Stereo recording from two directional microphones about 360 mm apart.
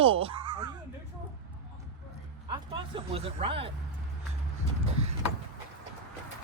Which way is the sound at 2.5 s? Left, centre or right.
Centre.